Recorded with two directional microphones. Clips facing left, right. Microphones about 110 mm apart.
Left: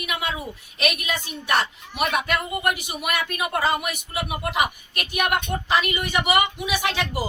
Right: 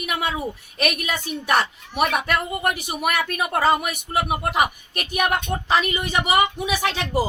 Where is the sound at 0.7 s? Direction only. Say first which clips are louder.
Right 1 dB; 45° right (ahead or behind).